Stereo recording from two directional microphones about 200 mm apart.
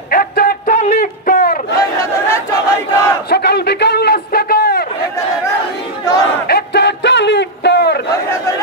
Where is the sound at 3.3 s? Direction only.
55° left (ahead or behind).